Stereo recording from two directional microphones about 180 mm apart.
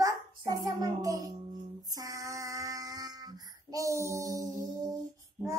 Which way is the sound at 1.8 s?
20° right (ahead or behind).